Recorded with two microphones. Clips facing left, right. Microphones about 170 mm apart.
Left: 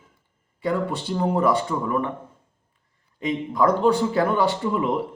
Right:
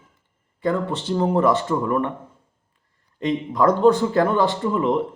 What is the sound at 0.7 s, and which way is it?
Speech, 5° left (ahead or behind).